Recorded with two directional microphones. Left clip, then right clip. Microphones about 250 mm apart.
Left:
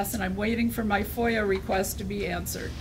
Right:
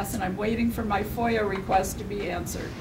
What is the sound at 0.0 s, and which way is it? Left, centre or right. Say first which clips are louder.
Speech: right 1 dB; left.